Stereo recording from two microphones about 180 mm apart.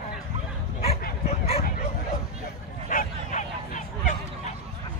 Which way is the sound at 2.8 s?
45° left (ahead or behind).